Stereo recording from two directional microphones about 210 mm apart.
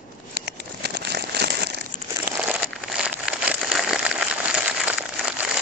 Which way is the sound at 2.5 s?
5° right (ahead or behind).